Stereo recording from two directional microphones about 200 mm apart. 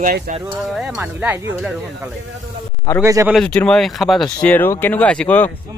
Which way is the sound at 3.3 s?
5° left (ahead or behind).